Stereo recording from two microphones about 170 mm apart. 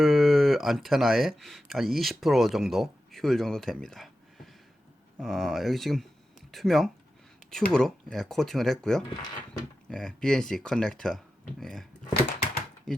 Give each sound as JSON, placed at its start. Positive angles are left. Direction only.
{"t": 0.0, "sound": "speech", "side_deg": 0}
{"t": 5.2, "sound": "speech", "side_deg": 0}
{"t": 9.0, "sound": "speech", "side_deg": 25}
{"t": 9.9, "sound": "speech", "side_deg": 5}
{"t": 12.9, "sound": "speech", "side_deg": 5}